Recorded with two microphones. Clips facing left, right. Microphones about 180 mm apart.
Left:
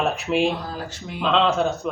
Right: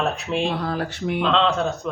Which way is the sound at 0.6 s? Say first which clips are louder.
Right 6 dB; 65° right (ahead or behind).